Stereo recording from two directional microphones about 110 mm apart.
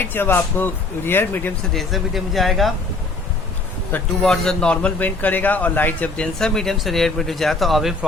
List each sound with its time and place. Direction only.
0.0 s speech: 20° left (ahead or behind)
1.7 s a man's voice: centre (ahead or behind)
4.2 s a man's voice: 5° left (ahead or behind)